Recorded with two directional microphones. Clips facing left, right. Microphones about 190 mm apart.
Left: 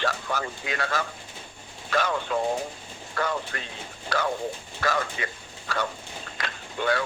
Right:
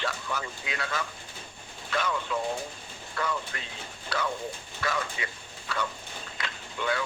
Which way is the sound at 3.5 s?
50° left (ahead or behind).